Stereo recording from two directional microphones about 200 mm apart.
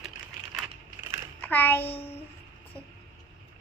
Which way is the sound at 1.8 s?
30° left (ahead or behind).